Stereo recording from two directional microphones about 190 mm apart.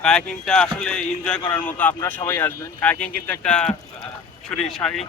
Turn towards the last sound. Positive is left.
turn(degrees=0)  # may be behind; listen again after turning